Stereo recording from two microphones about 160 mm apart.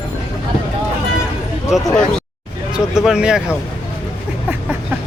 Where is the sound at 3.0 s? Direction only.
5° right (ahead or behind).